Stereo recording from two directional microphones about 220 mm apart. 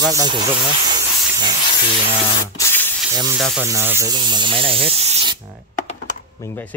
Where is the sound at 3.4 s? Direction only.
Centre (ahead or behind).